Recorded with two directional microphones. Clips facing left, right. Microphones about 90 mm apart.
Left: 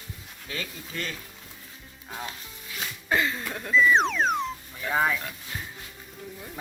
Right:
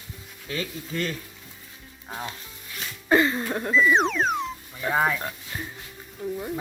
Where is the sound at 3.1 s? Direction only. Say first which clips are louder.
Right 6 dB; 30° right (ahead or behind).